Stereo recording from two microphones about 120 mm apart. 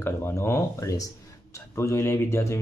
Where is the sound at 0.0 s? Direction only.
20° left (ahead or behind).